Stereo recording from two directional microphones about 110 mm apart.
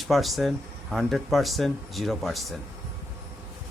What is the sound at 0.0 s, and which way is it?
Speech, centre (ahead or behind).